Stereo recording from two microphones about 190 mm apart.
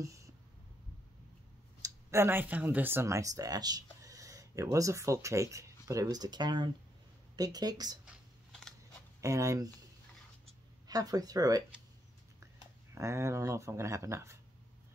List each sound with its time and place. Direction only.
0.0 s a sound: 15° right (ahead or behind)
1.8 s speech: 15° right (ahead or behind)
8.0 s a sound: centre (ahead or behind)
9.2 s speech: 15° right (ahead or behind)
10.9 s speech: 20° right (ahead or behind)
12.9 s speech: 15° right (ahead or behind)